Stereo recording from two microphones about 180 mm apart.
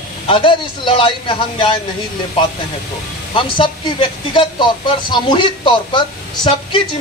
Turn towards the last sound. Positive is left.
turn(degrees=25)  # may be behind; listen again after turning